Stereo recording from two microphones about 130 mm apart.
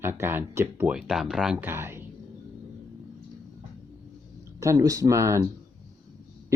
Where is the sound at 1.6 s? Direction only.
20° right (ahead or behind).